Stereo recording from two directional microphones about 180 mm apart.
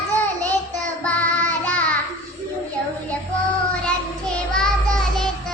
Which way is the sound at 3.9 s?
5° left (ahead or behind).